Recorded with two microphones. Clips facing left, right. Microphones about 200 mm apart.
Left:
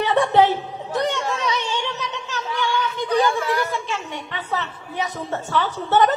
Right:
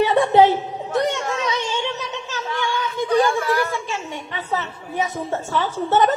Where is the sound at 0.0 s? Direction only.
20° right (ahead or behind).